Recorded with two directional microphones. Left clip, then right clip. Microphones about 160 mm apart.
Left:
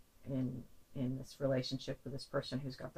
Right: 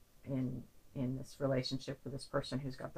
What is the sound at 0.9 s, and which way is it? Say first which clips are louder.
Speech: right 1 dB; 25° left (ahead or behind).